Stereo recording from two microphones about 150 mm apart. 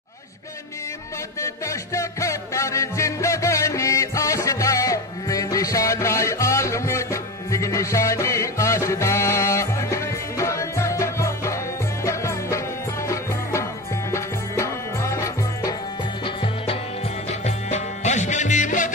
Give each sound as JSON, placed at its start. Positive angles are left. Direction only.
{"t": 1.4, "sound": "music", "side_deg": 20}
{"t": 17.3, "sound": "music", "side_deg": 50}